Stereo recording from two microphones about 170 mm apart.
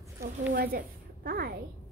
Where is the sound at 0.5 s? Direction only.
60° right (ahead or behind).